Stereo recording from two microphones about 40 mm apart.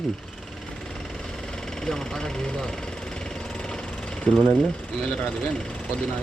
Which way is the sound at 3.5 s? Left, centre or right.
Centre.